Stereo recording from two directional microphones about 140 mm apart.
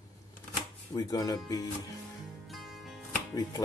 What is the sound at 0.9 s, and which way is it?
Speech, 25° left (ahead or behind).